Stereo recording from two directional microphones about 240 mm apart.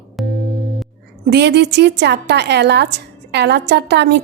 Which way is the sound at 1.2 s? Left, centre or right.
Right.